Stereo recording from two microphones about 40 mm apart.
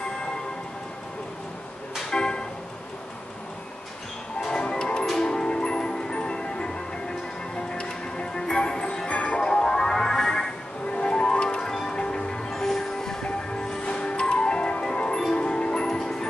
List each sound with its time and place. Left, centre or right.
2.0 s vehicle: centre
4.6 s music: left
9.4 s music: centre
10.9 s music: left